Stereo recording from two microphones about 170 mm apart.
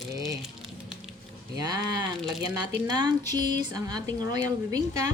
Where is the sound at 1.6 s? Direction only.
20° right (ahead or behind).